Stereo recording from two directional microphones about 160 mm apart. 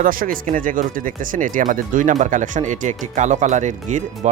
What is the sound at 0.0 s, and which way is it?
Speech, 60° right (ahead or behind).